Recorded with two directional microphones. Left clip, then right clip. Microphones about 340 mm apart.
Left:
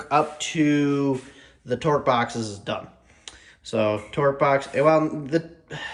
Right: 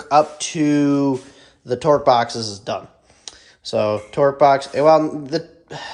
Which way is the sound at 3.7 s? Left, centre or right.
Centre.